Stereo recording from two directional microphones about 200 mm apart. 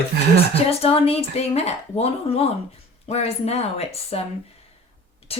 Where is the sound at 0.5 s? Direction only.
30° left (ahead or behind).